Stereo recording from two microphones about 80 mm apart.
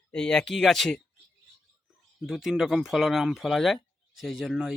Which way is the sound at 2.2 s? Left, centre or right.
Centre.